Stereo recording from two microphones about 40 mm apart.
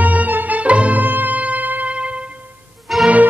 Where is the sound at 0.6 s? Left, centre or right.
Right.